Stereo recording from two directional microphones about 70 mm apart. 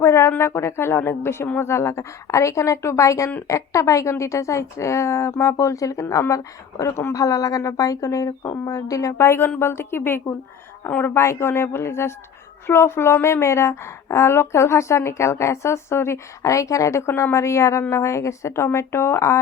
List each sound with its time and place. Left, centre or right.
0.0 s a woman's voice: left
7.1 s speech: left
9.1 s a woman's voice: left